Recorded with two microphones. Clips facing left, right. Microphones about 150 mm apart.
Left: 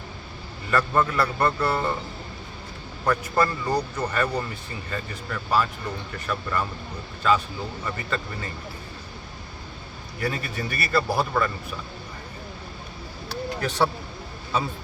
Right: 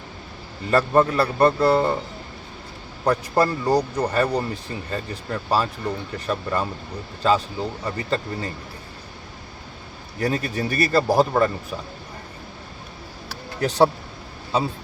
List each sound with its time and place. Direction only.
0.7 s speech: 35° right (ahead or behind)
3.0 s speech: 30° right (ahead or behind)
10.2 s speech: 40° right (ahead or behind)
13.6 s speech: 40° right (ahead or behind)